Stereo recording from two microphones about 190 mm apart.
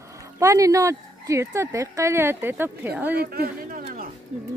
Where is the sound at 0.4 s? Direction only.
15° right (ahead or behind).